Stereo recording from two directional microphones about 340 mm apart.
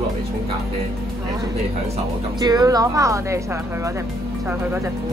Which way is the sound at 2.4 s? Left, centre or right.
Centre.